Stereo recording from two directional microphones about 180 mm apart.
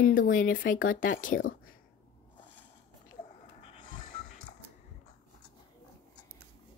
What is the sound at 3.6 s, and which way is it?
Vehicle, 30° left (ahead or behind).